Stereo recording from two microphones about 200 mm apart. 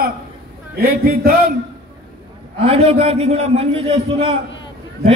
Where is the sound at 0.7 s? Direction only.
50° right (ahead or behind).